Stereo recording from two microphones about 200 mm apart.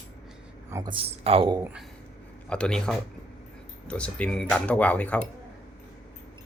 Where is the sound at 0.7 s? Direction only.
20° right (ahead or behind).